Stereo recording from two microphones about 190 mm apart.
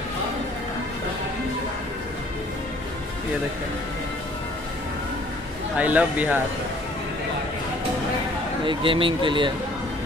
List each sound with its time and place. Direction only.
5.8 s speech: 10° right (ahead or behind)
8.6 s speech: 25° right (ahead or behind)